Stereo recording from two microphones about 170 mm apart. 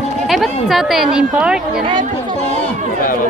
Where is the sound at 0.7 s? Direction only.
Centre (ahead or behind).